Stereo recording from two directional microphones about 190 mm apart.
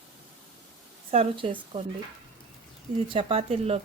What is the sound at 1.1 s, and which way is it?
Speech, 30° right (ahead or behind).